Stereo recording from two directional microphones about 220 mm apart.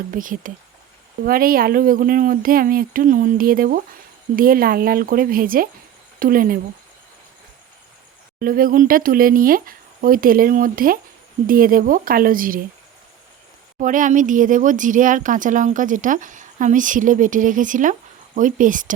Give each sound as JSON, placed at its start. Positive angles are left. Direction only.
{"t": 0.1, "sound": "speech", "side_deg": -40}
{"t": 8.4, "sound": "speech", "side_deg": -40}
{"t": 13.7, "sound": "speech", "side_deg": -35}